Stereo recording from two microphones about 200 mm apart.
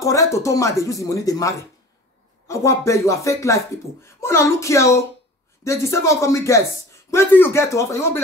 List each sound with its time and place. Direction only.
0.0 s speech: 15° left (ahead or behind)